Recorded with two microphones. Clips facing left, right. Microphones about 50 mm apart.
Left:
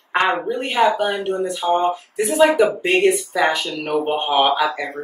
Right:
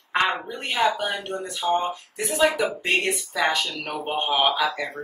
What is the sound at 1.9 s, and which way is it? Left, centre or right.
Speech, centre.